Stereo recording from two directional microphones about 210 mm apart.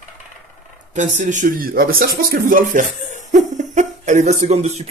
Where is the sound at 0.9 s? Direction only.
35° right (ahead or behind).